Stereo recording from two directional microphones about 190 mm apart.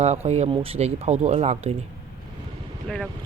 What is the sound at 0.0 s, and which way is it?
Speech, 35° right (ahead or behind).